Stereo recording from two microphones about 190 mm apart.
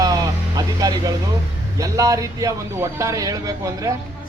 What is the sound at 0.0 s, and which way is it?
Vehicle, 20° right (ahead or behind).